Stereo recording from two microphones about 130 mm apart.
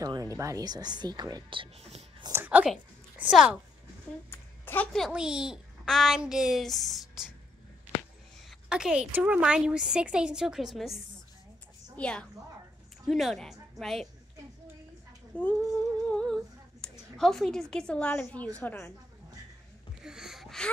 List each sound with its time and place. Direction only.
0.0 s speech: 25° right (ahead or behind); by 2.0 s 55° right (ahead or behind)
2.3 s a woman's voice: 10° right (ahead or behind)
4.3 s a sound: 15° left (ahead or behind)
4.9 s a child's voice: 5° right (ahead or behind)
8.5 s a woman's voice: 5° right (ahead or behind)
12.0 s a woman's voice: 10° left (ahead or behind)
15.6 s humming: 5° left (ahead or behind)
16.8 s a woman's voice: 5° left (ahead or behind)
20.0 s a sound: 5° right (ahead or behind)